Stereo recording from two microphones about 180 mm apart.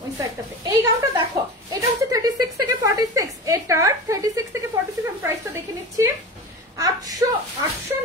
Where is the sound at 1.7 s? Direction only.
20° right (ahead or behind).